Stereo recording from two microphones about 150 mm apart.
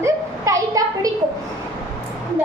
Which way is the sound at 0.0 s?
20° right (ahead or behind).